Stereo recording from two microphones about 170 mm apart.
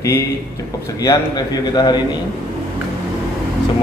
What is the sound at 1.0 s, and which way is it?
A man's voice, 20° left (ahead or behind).